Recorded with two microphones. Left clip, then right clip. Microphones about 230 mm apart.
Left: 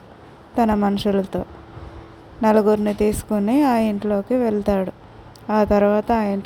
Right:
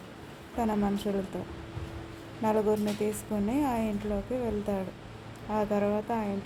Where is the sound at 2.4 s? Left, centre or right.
Left.